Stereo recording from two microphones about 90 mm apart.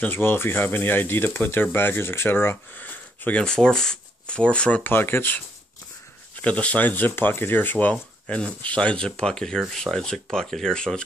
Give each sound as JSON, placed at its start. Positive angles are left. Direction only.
{"t": 0.0, "sound": "speech", "side_deg": 25}
{"t": 4.9, "sound": "speech", "side_deg": 25}
{"t": 6.4, "sound": "speech", "side_deg": 15}